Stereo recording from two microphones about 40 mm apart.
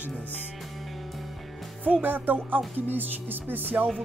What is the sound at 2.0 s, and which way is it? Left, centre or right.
Speech, right.